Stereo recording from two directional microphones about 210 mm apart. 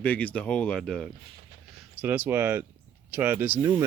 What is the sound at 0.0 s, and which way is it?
Speech, 5° left (ahead or behind).